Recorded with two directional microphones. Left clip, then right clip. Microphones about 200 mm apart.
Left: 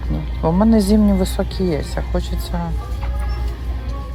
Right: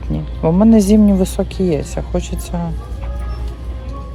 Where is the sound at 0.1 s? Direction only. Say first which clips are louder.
Right 3 dB; 35° right (ahead or behind).